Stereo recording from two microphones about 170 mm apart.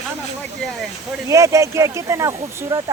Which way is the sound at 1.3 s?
15° right (ahead or behind).